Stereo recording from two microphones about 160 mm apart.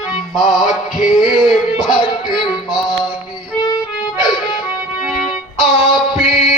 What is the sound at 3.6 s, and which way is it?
Music, 25° left (ahead or behind).